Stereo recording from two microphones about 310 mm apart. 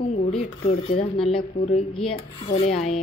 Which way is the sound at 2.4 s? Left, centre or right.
Left.